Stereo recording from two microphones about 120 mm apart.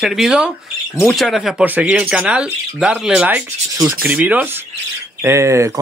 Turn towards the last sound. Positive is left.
turn(degrees=-25)  # may be behind; listen again after turning